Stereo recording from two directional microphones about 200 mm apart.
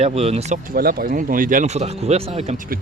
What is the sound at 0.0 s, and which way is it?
Speech, 30° right (ahead or behind).